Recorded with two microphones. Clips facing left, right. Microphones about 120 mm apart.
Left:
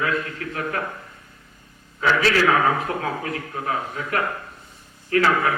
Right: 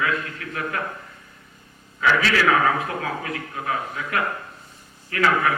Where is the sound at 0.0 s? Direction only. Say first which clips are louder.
Left 1 dB; 35° left (ahead or behind).